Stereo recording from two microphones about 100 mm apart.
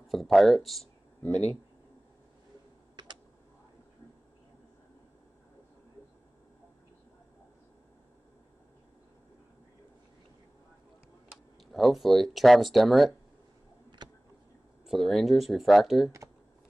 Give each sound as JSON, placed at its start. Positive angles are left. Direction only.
{"t": 0.1, "sound": "speech", "side_deg": 0}
{"t": 11.7, "sound": "speech", "side_deg": 0}
{"t": 14.9, "sound": "speech", "side_deg": 0}